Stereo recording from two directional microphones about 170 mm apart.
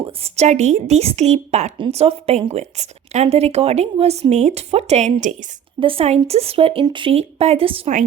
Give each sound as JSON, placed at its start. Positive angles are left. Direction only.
{"t": 0.0, "sound": "a woman's voice", "side_deg": -40}